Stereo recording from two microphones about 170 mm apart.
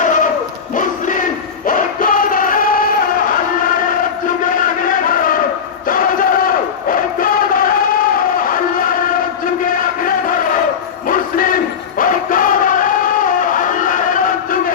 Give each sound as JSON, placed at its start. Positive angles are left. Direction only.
{"t": 0.0, "sound": "a sound", "side_deg": 50}
{"t": 0.8, "sound": "music", "side_deg": 50}
{"t": 4.4, "sound": "a sound", "side_deg": 50}
{"t": 5.9, "sound": "crowd", "side_deg": 55}
{"t": 8.4, "sound": "music", "side_deg": 55}
{"t": 11.1, "sound": "crowd", "side_deg": 55}